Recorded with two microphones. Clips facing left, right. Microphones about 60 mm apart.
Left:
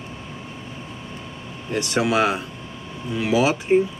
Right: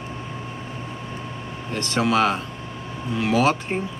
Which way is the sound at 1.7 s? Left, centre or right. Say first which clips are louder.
Left 1 dB; centre.